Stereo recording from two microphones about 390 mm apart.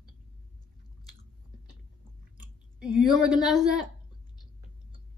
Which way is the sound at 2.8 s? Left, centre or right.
Centre.